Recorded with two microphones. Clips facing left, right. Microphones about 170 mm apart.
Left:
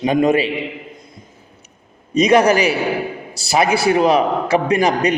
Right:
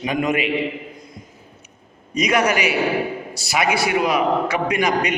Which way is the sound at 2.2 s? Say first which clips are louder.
Left 6 dB; 30° left (ahead or behind).